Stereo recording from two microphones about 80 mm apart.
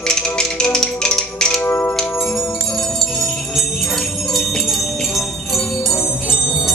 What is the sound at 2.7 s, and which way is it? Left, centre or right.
Music, centre.